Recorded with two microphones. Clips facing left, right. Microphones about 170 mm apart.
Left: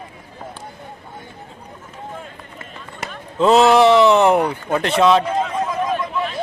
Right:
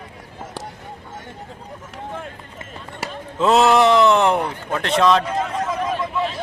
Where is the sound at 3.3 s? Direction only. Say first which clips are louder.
Left 3 dB; centre (ahead or behind).